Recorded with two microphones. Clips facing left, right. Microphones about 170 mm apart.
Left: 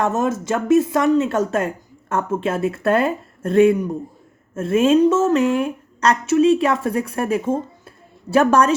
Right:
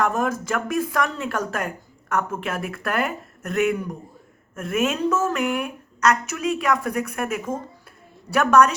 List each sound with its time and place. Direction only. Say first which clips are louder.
0.0 s a woman's voice: left 3 dB; 25° left (ahead or behind)